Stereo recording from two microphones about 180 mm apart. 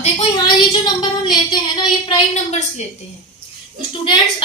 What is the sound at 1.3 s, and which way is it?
Speech, 25° left (ahead or behind).